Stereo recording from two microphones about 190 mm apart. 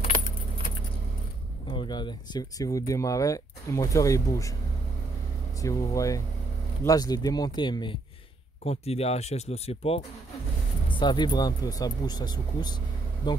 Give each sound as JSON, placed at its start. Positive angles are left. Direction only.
{"t": 1.7, "sound": "speech", "side_deg": 25}
{"t": 5.6, "sound": "speech", "side_deg": 15}